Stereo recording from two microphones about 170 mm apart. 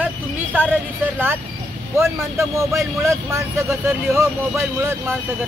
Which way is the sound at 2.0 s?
15° right (ahead or behind).